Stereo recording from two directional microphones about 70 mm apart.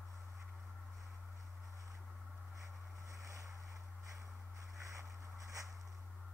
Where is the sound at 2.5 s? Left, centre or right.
Right.